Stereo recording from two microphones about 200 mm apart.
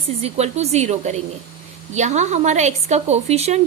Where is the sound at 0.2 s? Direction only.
30° right (ahead or behind).